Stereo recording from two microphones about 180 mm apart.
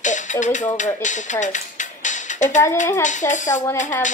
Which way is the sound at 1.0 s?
45° left (ahead or behind).